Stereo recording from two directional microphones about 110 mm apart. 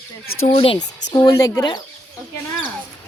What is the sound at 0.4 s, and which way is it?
Speech, 60° left (ahead or behind).